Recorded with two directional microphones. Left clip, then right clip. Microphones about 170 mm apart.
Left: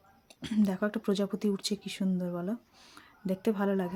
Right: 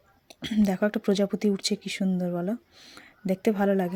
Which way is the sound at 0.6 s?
25° right (ahead or behind).